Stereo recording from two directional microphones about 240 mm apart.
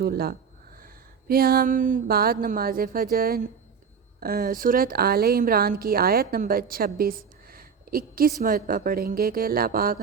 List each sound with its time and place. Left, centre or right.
0.0 s a woman's voice: right